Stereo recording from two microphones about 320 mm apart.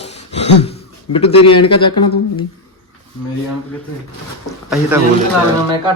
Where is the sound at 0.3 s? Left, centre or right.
Centre.